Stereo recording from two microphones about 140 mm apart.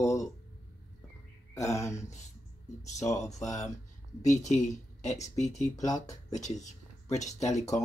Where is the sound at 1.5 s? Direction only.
20° left (ahead or behind).